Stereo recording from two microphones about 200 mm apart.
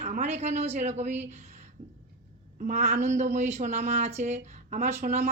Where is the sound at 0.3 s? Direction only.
35° right (ahead or behind).